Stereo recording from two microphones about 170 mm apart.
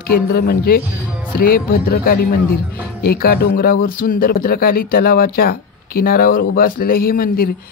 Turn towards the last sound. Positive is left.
turn(degrees=60)  # may be behind; listen again after turning